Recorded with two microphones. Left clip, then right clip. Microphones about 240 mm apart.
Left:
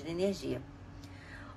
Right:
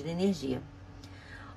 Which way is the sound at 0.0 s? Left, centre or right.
Right.